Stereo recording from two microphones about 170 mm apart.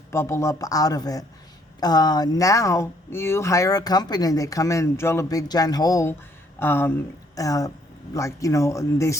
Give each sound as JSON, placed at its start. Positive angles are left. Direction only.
{"t": 0.1, "sound": "speech", "side_deg": 15}